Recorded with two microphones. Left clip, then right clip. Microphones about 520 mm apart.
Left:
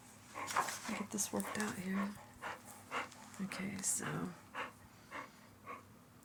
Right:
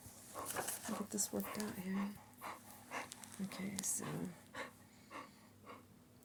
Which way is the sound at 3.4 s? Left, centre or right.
Right.